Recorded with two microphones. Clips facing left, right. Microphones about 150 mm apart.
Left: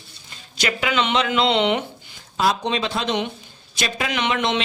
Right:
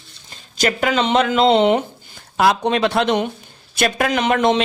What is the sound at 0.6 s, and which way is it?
Speech, 45° right (ahead or behind).